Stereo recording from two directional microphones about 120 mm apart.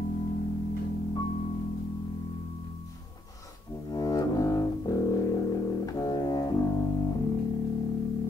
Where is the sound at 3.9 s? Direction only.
30° left (ahead or behind).